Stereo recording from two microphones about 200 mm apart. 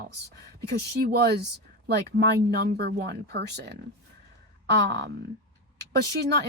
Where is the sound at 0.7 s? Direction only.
55° right (ahead or behind).